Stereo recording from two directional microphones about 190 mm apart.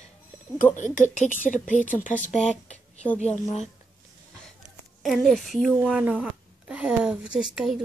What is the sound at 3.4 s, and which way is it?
Speech, 35° left (ahead or behind).